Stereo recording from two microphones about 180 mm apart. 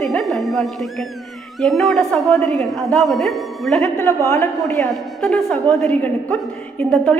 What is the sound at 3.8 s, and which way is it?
Speech, 15° left (ahead or behind).